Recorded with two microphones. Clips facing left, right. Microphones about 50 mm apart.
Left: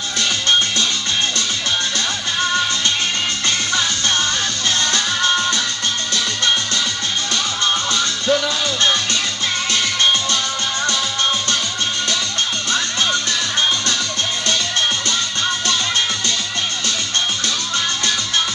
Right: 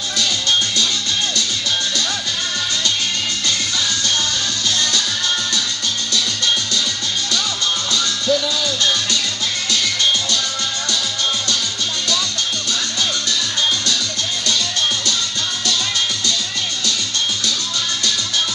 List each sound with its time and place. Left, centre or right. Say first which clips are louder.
0.2 s music: left 2 dB; left
3.4 s music: left 2 dB; left
7.9 s music: left 1 dB; left